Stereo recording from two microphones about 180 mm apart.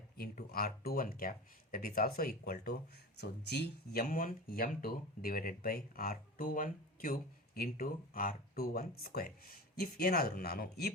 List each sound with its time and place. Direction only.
0.2 s speech: 55° left (ahead or behind)